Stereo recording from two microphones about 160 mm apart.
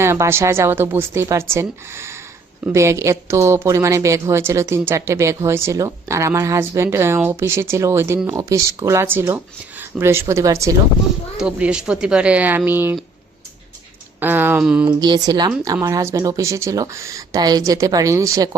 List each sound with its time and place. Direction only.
0.0 s a woman's voice: 15° right (ahead or behind)
11.3 s a woman's voice: 5° right (ahead or behind)
14.2 s a woman's voice: 10° right (ahead or behind)
14.8 s speech: 25° right (ahead or behind)